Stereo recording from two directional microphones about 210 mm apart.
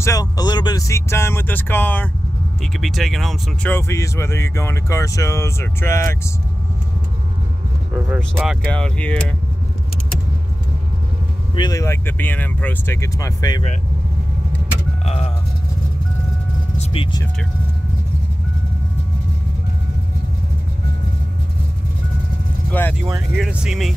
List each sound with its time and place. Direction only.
0.0 s speech: 15° left (ahead or behind)
8.2 s speech: centre (ahead or behind)
11.5 s speech: 20° left (ahead or behind)
15.0 s speech: 30° left (ahead or behind)
16.7 s vehicle: 30° left (ahead or behind)
22.7 s speech: 10° left (ahead or behind)
23.3 s speech: centre (ahead or behind)